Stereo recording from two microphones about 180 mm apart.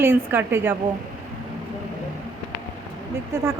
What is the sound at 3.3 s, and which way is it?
Speech, 15° right (ahead or behind).